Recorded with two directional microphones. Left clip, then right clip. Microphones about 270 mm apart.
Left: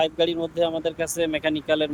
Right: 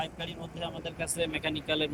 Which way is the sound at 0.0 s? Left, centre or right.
Left.